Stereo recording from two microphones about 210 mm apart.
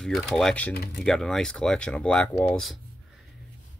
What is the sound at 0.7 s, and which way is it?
Speech, 50° left (ahead or behind).